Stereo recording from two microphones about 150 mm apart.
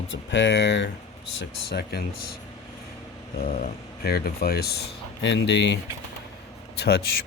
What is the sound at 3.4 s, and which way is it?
Speech, 75° left (ahead or behind).